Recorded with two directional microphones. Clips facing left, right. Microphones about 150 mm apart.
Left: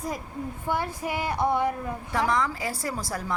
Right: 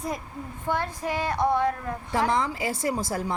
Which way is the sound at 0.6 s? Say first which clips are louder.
Right 2 dB; 10° left (ahead or behind).